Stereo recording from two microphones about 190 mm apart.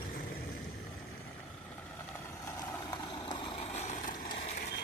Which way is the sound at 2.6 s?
20° left (ahead or behind).